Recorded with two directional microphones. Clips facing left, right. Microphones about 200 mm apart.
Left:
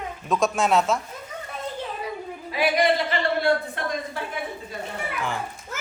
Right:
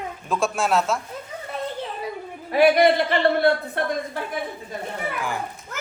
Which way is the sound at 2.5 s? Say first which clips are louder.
Right 6 dB; 60° right (ahead or behind).